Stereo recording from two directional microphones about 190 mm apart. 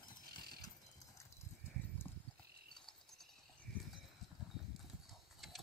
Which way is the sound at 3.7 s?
60° left (ahead or behind).